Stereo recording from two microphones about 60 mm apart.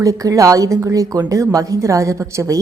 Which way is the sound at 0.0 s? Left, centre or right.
Right.